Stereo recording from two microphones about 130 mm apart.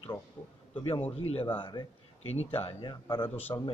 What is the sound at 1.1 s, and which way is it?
Speech, 50° left (ahead or behind).